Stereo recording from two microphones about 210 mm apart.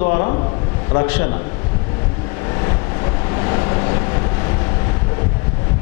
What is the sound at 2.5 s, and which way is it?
Vehicle, 20° left (ahead or behind).